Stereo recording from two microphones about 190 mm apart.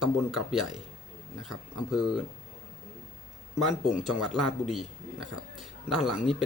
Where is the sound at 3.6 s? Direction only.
Centre (ahead or behind).